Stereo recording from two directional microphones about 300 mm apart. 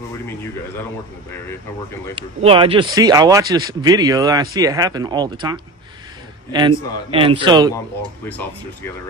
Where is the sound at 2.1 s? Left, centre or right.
Centre.